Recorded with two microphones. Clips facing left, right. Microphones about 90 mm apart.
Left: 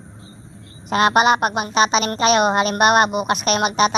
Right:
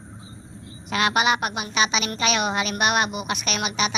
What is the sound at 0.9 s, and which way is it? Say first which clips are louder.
A woman's voice: left 6 dB; 40° left (ahead or behind).